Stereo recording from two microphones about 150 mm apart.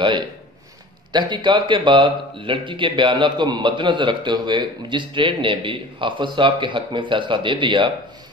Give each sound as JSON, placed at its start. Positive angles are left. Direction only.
{"t": 1.1, "sound": "speech", "side_deg": -30}